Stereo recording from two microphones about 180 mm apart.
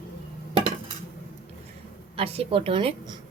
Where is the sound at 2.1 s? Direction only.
30° right (ahead or behind).